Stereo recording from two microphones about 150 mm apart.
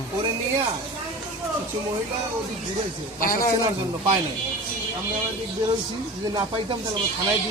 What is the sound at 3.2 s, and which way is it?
Speech, 70° left (ahead or behind).